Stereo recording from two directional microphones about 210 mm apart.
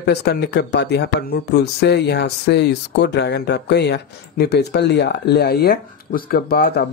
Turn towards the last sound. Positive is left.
turn(degrees=45)  # may be behind; listen again after turning